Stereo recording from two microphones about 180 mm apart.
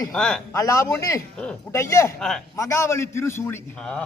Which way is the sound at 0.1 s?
5° left (ahead or behind).